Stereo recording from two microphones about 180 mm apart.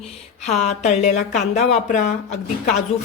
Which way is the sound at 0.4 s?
40° left (ahead or behind).